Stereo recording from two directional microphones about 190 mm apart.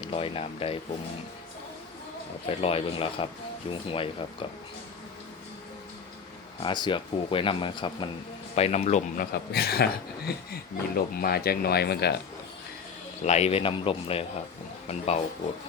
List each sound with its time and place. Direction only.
0.1 s speech: 30° left (ahead or behind)
2.5 s a man's voice: 30° left (ahead or behind)
6.6 s a man's voice: 25° left (ahead or behind)
9.3 s speech: 55° left (ahead or behind)
13.2 s a man's voice: 35° left (ahead or behind)